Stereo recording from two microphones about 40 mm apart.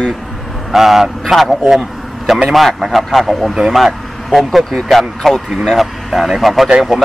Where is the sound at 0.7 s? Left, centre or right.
Centre.